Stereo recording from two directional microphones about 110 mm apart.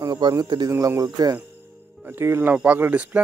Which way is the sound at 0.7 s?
30° right (ahead or behind).